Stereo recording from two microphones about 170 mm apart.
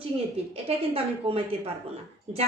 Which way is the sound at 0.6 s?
35° right (ahead or behind).